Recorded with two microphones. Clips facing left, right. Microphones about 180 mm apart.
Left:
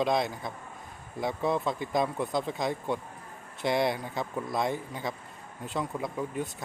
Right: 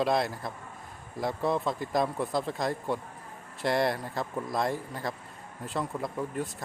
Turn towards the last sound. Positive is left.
turn(degrees=0)  # may be behind; listen again after turning